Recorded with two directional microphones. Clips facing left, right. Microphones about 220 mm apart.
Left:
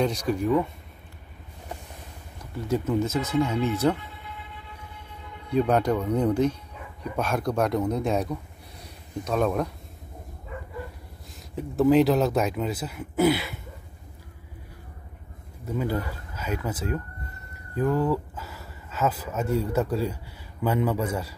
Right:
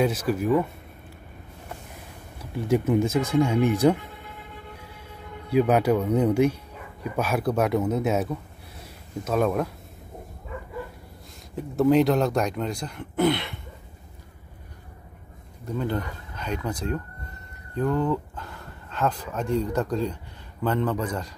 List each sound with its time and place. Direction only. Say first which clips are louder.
0.0 s speech: right 1 dB; 5° right (ahead or behind)
2.7 s speech: right 3 dB; 15° right (ahead or behind)
4.0 s a sound: right 1 dB; 45° right (ahead or behind)
5.5 s speech: right 2 dB; 5° right (ahead or behind)
11.5 s speech: even; centre (ahead or behind)
15.6 s speech: even; 5° left (ahead or behind)